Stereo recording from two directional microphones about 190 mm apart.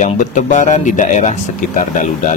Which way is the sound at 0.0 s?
40° left (ahead or behind).